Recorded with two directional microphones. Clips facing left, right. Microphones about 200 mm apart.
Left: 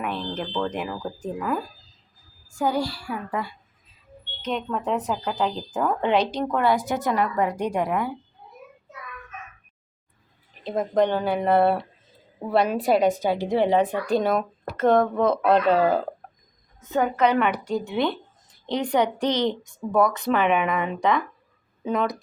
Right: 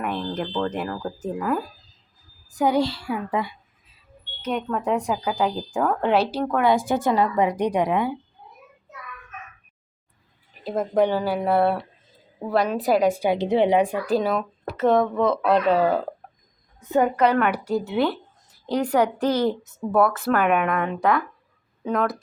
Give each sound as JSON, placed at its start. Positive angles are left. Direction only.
{"t": 0.6, "sound": "speech", "side_deg": 10}
{"t": 1.2, "sound": "speech", "side_deg": -5}
{"t": 2.5, "sound": "a woman's voice", "side_deg": -20}
{"t": 4.4, "sound": "a woman's voice", "side_deg": -10}
{"t": 6.7, "sound": "a woman's voice", "side_deg": -30}
{"t": 10.6, "sound": "a woman's voice", "side_deg": -5}
{"t": 13.1, "sound": "a woman's voice", "side_deg": -15}